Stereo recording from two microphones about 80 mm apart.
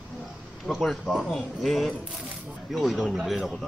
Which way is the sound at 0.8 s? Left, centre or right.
Centre.